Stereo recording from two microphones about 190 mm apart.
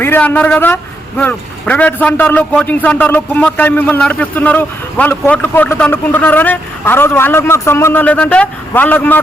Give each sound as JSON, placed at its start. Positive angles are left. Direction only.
{"t": 0.0, "sound": "a man's voice", "side_deg": 10}